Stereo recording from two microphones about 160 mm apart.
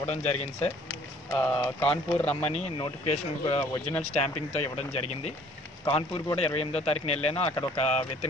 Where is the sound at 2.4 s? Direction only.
45° left (ahead or behind).